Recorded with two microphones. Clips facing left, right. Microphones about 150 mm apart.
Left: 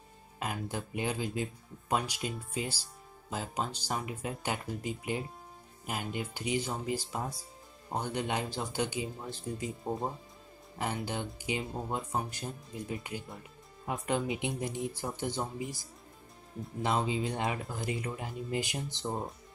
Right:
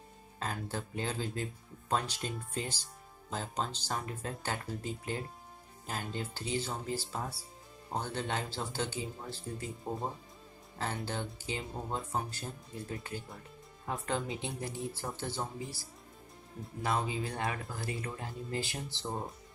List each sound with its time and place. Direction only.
0.4 s speech: 15° left (ahead or behind)